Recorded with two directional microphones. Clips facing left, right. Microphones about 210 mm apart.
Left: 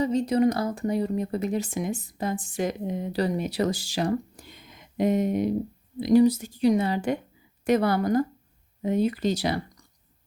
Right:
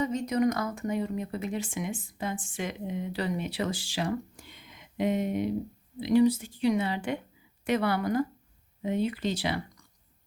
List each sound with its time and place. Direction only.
0.0 s speech: 30° left (ahead or behind)